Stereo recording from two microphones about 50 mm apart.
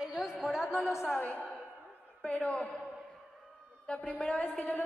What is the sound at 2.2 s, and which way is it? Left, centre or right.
Speech, left.